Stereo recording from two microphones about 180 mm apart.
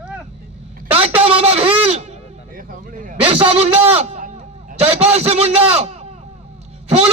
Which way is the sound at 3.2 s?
35° right (ahead or behind).